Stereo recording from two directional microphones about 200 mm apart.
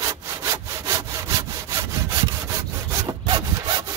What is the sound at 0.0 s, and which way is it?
Sawing, 15° right (ahead or behind).